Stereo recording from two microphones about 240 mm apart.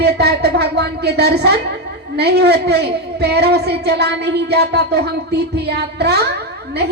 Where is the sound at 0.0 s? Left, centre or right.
Right.